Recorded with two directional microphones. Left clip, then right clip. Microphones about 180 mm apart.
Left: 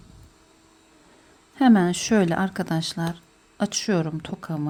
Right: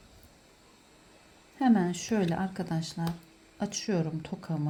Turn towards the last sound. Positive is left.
turn(degrees=20)  # may be behind; listen again after turning